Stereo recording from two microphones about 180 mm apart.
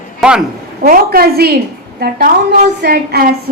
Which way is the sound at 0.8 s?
55° right (ahead or behind).